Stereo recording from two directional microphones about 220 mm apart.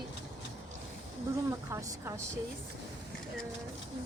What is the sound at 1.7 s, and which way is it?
Speech, 15° right (ahead or behind).